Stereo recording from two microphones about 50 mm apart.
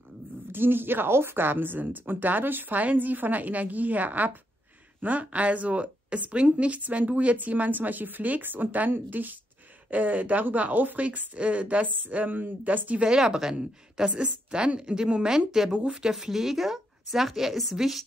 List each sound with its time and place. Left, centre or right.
0.5 s a woman's voice: right
13.0 s a woman's voice: centre